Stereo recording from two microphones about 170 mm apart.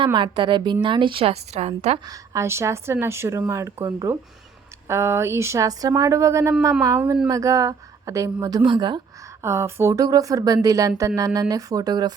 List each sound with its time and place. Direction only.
0.0 s a woman's voice: 30° right (ahead or behind)
2.0 s a woman's voice: 15° right (ahead or behind)
9.4 s a woman's voice: 15° right (ahead or behind)